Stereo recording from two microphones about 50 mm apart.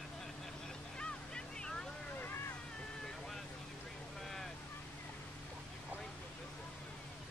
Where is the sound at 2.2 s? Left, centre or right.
Left.